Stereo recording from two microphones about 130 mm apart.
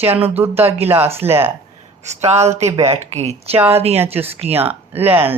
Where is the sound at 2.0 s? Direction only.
60° right (ahead or behind).